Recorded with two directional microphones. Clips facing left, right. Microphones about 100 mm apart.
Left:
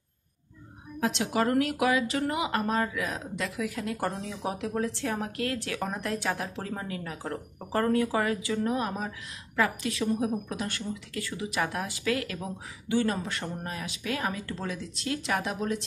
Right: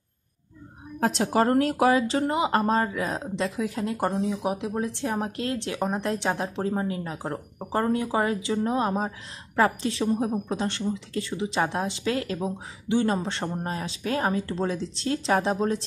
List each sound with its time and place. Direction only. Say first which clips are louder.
0.9 s a woman's voice: right 5 dB; 40° right (ahead or behind)